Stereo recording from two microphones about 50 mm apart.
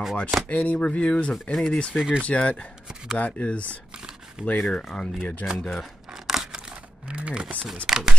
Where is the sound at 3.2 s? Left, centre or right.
Left.